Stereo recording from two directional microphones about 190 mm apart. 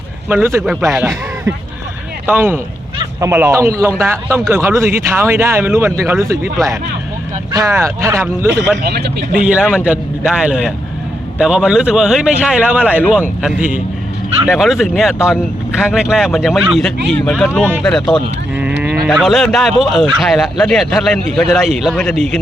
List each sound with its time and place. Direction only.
0.3 s speech: 10° right (ahead or behind)
2.2 s speech: 10° right (ahead or behind)
7.5 s speech: 15° right (ahead or behind)
8.8 s speech: 55° right (ahead or behind)
9.3 s speech: 5° right (ahead or behind)
14.4 s speech: centre (ahead or behind)